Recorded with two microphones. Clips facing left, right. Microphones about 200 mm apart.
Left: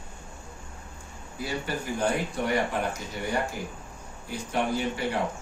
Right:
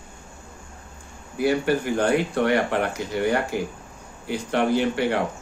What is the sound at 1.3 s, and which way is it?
Speech, 65° right (ahead or behind).